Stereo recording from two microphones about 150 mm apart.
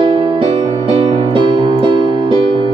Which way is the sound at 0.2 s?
35° right (ahead or behind).